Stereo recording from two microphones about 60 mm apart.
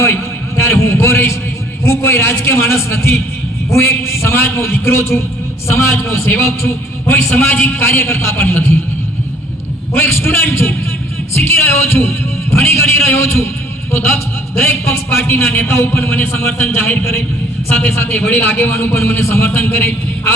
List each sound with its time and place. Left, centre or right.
0.0 s a sound: left
1.8 s a man's voice: left
7.1 s a man's voice: left
8.4 s a man's voice: left
9.9 s a man's voice: left
15.5 s a man's voice: left